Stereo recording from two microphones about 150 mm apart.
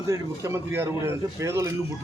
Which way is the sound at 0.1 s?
20° right (ahead or behind).